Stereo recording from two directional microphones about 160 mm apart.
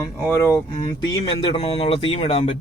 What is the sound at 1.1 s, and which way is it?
Speech, 30° left (ahead or behind).